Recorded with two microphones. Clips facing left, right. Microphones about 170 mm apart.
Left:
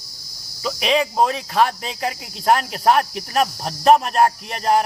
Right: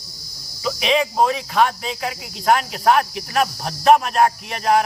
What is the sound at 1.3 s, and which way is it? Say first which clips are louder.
Speech: even; 35° left (ahead or behind).